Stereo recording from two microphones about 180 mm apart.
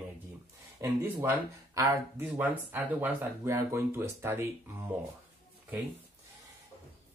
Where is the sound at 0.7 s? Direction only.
15° right (ahead or behind).